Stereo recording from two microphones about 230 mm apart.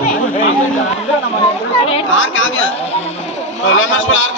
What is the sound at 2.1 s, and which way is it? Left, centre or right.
A man's voice, left.